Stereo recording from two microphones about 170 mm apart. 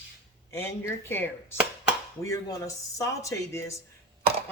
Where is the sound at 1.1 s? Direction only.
15° left (ahead or behind).